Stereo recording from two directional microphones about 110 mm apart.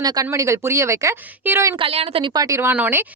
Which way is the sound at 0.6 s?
25° right (ahead or behind).